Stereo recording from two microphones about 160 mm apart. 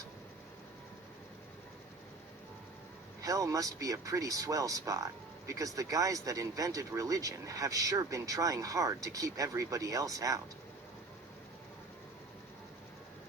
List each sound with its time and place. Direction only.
3.2 s speech: 20° right (ahead or behind)